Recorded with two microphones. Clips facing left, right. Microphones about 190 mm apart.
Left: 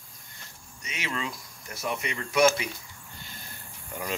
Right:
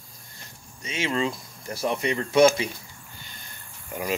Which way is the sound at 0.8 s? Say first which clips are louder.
Right 8 dB; 30° right (ahead or behind).